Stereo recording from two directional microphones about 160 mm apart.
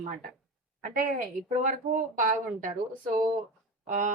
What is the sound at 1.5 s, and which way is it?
A woman's voice, 55° right (ahead or behind).